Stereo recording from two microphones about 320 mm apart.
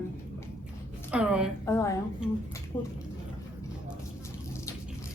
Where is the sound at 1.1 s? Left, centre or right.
Centre.